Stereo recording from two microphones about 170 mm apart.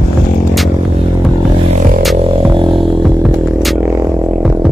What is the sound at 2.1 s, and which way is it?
Music, 30° right (ahead or behind).